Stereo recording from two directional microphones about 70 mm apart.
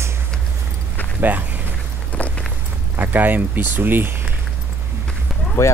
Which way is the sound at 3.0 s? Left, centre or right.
Right.